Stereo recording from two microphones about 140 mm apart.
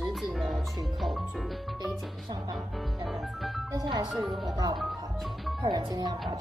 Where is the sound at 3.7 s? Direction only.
25° right (ahead or behind).